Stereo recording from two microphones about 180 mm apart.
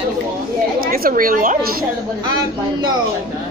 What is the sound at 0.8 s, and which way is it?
Speech, 55° right (ahead or behind).